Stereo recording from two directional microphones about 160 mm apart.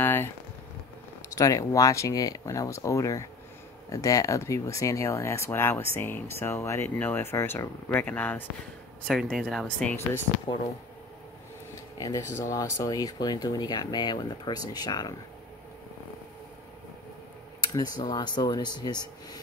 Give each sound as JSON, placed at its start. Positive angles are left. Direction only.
{"t": 0.0, "sound": "a sound", "side_deg": 10}
{"t": 1.3, "sound": "speech", "side_deg": 20}
{"t": 12.0, "sound": "speech", "side_deg": 20}
{"t": 17.7, "sound": "speech", "side_deg": 25}